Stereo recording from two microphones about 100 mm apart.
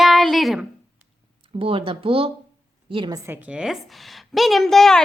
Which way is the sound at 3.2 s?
20° right (ahead or behind).